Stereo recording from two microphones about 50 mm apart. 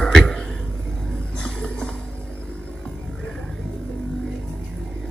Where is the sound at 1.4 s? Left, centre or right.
Centre.